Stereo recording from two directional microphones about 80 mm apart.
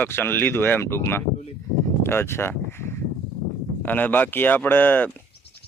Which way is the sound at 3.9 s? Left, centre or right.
Left.